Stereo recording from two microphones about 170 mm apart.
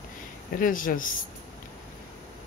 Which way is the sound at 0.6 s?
55° left (ahead or behind).